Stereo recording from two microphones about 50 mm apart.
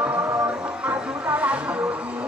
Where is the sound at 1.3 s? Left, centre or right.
Right.